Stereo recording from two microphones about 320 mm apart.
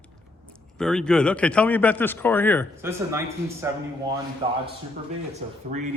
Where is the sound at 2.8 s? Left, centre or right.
Centre.